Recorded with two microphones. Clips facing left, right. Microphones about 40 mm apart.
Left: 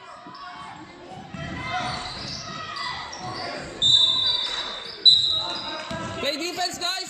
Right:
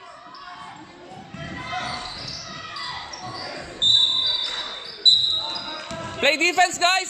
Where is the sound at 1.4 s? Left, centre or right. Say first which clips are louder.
Left 1 dB; centre.